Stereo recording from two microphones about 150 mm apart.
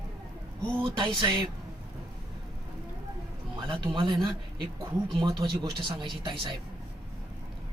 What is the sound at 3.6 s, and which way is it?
Speech, 30° right (ahead or behind).